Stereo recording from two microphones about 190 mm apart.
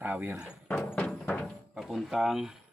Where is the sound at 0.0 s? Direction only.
10° right (ahead or behind).